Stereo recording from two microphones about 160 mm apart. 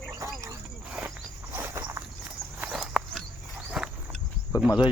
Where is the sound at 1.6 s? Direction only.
15° right (ahead or behind).